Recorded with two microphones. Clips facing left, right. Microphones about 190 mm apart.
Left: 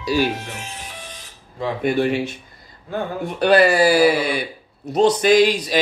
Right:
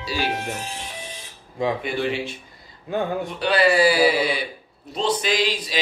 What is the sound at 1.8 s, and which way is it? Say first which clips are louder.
Speech: left 6 dB; 50° left (ahead or behind).